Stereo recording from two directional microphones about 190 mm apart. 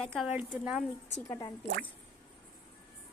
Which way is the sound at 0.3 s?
5° right (ahead or behind).